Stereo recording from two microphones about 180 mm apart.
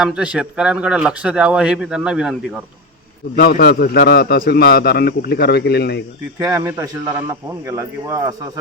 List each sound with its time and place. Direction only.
0.0 s speech: 5° right (ahead or behind)
3.3 s a man's voice: 55° left (ahead or behind)
6.4 s a man's voice: 15° right (ahead or behind)